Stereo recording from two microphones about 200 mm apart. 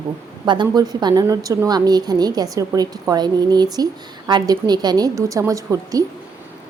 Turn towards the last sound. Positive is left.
turn(degrees=-15)  # may be behind; listen again after turning